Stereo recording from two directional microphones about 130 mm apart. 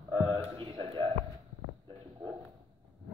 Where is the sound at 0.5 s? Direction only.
40° right (ahead or behind).